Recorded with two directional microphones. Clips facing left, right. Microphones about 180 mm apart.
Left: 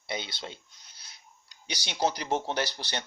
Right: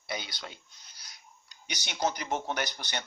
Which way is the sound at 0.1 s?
25° left (ahead or behind).